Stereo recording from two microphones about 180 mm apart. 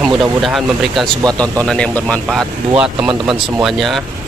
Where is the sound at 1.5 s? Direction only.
5° left (ahead or behind).